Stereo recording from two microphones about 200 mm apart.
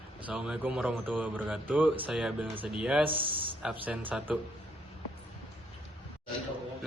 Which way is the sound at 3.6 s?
5° right (ahead or behind).